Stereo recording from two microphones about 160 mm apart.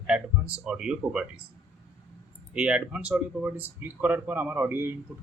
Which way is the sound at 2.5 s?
5° right (ahead or behind).